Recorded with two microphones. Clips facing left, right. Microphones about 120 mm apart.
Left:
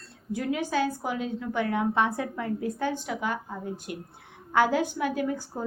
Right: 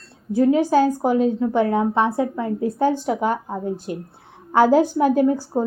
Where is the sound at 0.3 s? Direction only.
30° right (ahead or behind).